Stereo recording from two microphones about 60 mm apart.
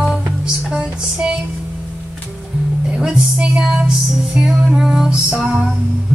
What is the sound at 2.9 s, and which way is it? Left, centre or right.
Music, centre.